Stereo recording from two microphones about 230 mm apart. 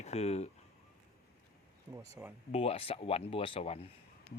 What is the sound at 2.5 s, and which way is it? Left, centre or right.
Speech, left.